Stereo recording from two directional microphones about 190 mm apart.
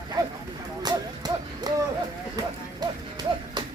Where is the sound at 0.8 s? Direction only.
20° right (ahead or behind).